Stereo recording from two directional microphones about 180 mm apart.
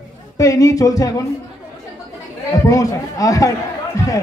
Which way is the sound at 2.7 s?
20° left (ahead or behind).